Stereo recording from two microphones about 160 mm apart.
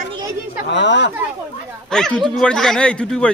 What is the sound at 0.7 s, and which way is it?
Speech, 90° left.